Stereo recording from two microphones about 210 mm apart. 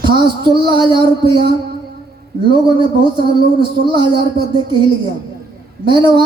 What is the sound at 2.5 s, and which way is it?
Speech, 25° right (ahead or behind).